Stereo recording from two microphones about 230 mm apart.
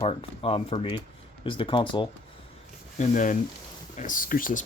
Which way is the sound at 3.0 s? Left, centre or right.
Left.